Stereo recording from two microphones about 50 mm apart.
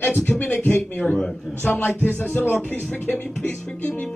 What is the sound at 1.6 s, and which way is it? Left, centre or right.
A man's voice, left.